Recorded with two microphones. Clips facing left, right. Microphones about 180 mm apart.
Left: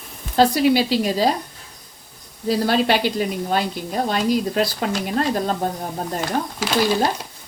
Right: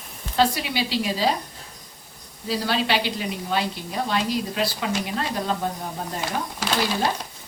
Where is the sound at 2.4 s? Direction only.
45° left (ahead or behind).